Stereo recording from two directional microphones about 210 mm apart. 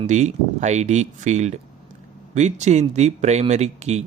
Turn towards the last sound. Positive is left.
turn(degrees=-30)  # may be behind; listen again after turning